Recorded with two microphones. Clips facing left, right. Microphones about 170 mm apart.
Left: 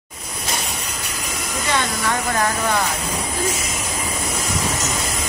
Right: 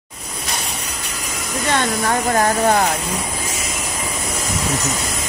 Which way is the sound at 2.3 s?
40° right (ahead or behind).